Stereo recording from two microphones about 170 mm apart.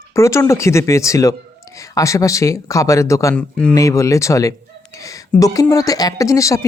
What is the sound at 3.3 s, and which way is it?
Speech, 5° left (ahead or behind).